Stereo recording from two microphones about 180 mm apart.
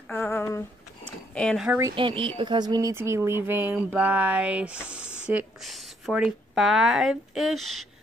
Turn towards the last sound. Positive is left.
turn(degrees=0)  # may be behind; listen again after turning